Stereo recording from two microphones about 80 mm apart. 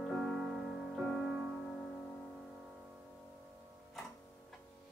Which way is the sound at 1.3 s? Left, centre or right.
Centre.